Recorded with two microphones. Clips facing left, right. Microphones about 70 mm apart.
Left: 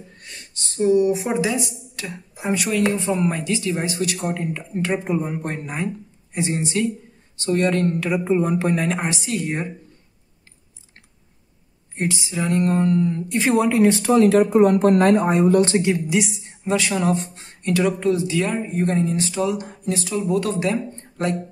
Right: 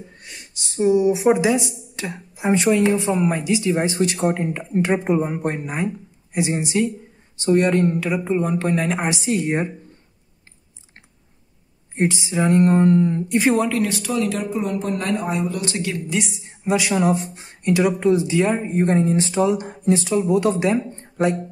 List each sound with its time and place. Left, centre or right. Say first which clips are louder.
0.2 s speech: even; centre; by 2.7 s right
2.9 s speech: right 2 dB; centre
8.1 s speech: left 1 dB; centre
9.1 s speech: right 4 dB; right
12.0 s speech: right 4 dB; right
13.7 s speech: left 6 dB; left
15.7 s a woman's voice: left 6 dB; left
16.1 s speech: left 3 dB; centre